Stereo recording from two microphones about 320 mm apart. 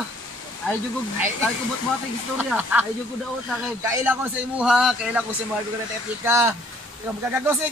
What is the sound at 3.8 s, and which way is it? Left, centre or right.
A man's voice, centre.